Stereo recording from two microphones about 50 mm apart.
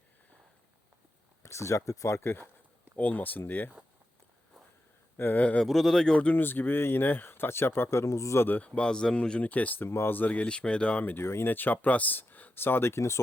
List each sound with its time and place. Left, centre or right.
1.4 s speech: left
2.2 s speech: left
3.0 s speech: left
5.1 s speech: left
5.6 s speech: centre
6.3 s speech: left
8.4 s speech: left
8.6 s speech: left
9.4 s speech: left
11.2 s speech: left
11.4 s speech: left
12.5 s speech: left